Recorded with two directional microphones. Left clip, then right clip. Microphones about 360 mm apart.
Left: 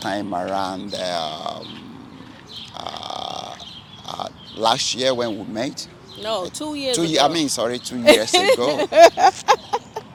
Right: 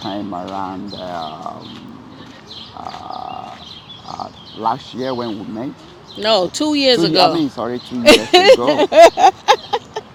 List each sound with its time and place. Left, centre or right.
0.0 s speech: centre
3.1 s burping: centre
4.9 s speech: centre
6.2 s speech: right
7.1 s speech: centre
8.0 s speech: right
8.9 s a sound: right